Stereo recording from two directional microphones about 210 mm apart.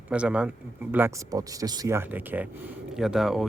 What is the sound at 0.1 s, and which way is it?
Speech, 5° right (ahead or behind).